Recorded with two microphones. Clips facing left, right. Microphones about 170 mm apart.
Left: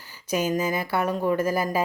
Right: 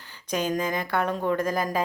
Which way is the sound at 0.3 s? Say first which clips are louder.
Left 2 dB; 10° left (ahead or behind).